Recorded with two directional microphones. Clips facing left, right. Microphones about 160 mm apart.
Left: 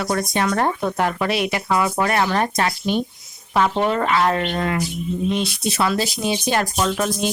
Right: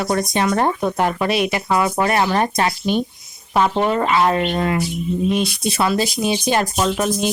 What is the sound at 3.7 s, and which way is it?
Speech, 10° right (ahead or behind).